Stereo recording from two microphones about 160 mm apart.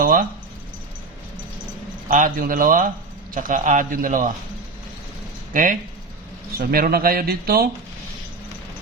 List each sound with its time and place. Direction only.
0.0 s a sound: 65° right (ahead or behind)
2.0 s a man's voice: 55° right (ahead or behind)
5.5 s a man's voice: 60° right (ahead or behind)